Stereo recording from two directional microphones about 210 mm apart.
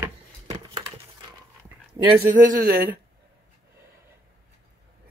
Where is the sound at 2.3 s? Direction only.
45° right (ahead or behind).